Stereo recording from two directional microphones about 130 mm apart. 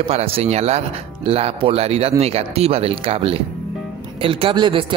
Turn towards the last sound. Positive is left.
turn(degrees=-40)  # may be behind; listen again after turning